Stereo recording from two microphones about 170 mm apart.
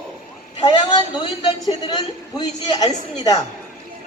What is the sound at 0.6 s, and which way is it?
A man's voice, 25° left (ahead or behind).